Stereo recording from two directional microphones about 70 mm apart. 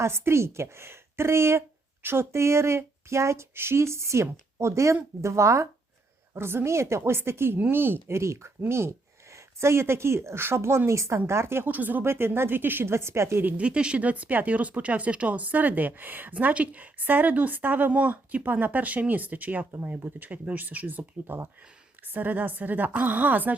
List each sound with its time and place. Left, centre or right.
0.0 s speech: right
13.4 s speech: centre